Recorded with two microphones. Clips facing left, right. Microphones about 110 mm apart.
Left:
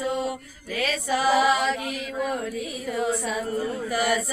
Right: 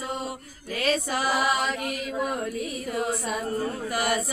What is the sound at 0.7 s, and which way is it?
Music, 40° right (ahead or behind).